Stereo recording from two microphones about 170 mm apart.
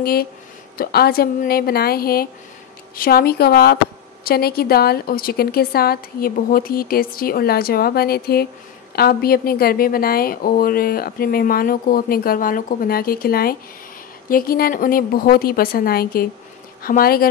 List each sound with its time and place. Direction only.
0.0 s a woman's voice: 60° left (ahead or behind)